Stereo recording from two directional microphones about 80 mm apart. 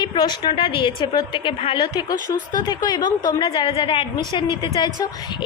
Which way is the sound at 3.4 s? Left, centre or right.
Left.